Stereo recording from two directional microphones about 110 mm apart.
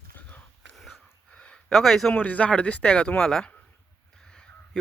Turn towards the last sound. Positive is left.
turn(degrees=5)  # may be behind; listen again after turning